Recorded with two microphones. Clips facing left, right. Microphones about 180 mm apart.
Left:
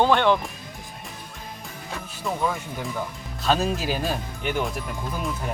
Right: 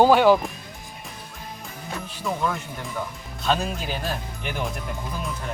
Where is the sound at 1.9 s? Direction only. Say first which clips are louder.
Right 1 dB; centre (ahead or behind).